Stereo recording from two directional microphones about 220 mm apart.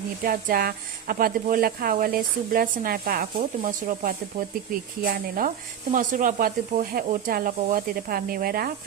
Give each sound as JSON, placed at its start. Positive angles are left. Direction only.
{"t": 0.3, "sound": "speech", "side_deg": -40}